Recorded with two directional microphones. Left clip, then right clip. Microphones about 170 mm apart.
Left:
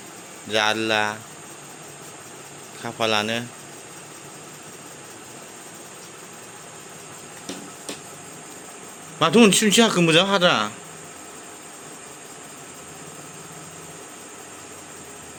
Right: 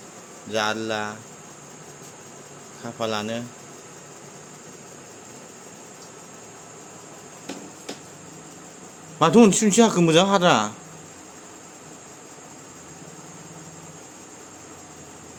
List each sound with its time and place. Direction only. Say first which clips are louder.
0.5 s speech: left 4 dB; 5° left (ahead or behind)
2.8 s speech: left 5 dB; 10° left (ahead or behind)
9.1 s speech: even; 25° right (ahead or behind)